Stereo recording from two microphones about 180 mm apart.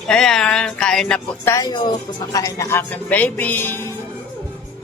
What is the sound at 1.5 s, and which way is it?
Speech, 20° left (ahead or behind).